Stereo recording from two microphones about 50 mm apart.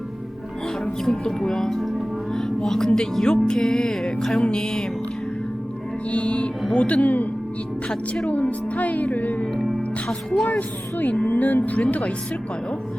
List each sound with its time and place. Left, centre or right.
1.0 s speech: centre
6.1 s speech: left
7.9 s speech: centre
8.3 s speech: left
11.3 s speech: left